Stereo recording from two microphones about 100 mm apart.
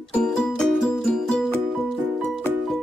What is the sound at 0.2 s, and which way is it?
Music, 10° left (ahead or behind).